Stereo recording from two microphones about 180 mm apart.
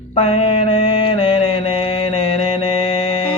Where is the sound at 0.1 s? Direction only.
35° left (ahead or behind).